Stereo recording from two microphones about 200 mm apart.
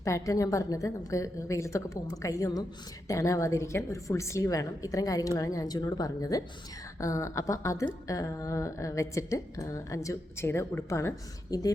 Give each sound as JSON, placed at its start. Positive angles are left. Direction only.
{"t": 0.0, "sound": "speech", "side_deg": 15}